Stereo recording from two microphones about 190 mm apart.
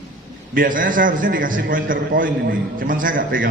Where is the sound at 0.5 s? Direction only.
45° right (ahead or behind).